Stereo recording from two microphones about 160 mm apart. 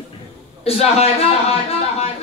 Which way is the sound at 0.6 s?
40° left (ahead or behind).